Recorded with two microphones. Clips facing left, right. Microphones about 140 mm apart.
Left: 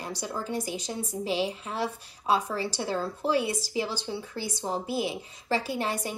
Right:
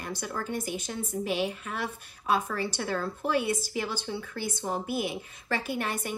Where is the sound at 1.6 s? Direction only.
30° left (ahead or behind).